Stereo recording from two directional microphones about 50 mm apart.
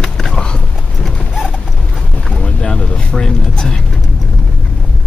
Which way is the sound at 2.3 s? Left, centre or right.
Left.